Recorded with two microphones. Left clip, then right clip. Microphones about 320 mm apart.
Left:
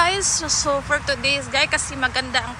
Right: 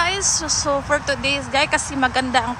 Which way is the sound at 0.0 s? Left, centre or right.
Centre.